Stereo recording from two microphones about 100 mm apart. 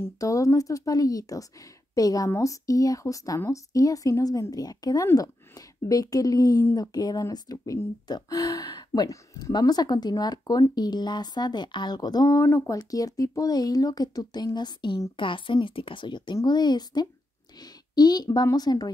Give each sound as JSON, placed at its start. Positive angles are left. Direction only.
{"t": 0.0, "sound": "a woman's voice", "side_deg": 35}